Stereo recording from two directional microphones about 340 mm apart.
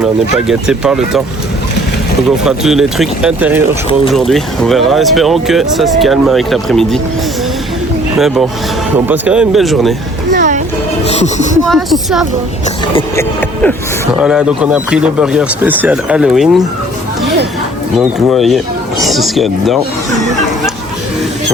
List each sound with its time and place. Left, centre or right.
0.0 s speech: centre
2.4 s speech: centre
9.0 s speech: centre
10.3 s a sound: right
11.0 s speech: centre
11.7 s speech: centre
17.9 s speech: centre